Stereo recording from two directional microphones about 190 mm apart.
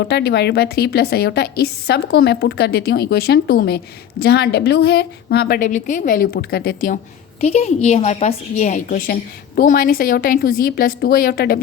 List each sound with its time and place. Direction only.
0.0 s a woman's voice: 60° left (ahead or behind)
7.4 s a woman's voice: 35° left (ahead or behind); by 11.6 s 55° left (ahead or behind)